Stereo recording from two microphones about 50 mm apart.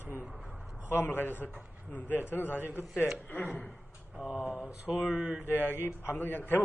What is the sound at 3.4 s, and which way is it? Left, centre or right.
Speech, left.